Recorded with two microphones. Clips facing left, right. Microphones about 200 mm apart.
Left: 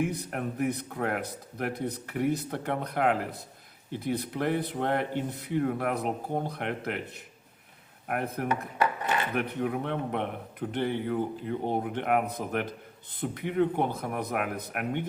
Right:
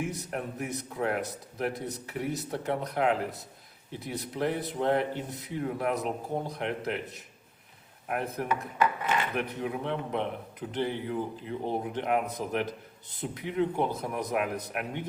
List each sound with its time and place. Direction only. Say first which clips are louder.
0.0 s a man's voice: left 3 dB; 55° left (ahead or behind)